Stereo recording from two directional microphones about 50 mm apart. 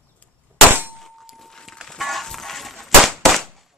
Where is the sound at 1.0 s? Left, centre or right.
Centre.